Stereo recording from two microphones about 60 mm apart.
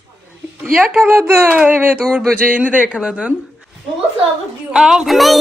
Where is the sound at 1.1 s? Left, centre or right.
Right.